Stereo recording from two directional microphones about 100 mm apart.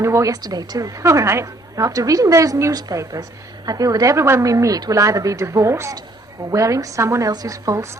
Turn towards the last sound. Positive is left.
turn(degrees=-30)  # may be behind; listen again after turning